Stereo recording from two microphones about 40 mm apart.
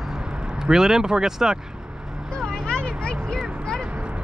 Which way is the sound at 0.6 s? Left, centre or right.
Centre.